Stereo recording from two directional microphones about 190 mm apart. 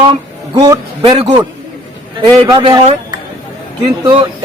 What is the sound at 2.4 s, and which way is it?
Speech, 20° right (ahead or behind).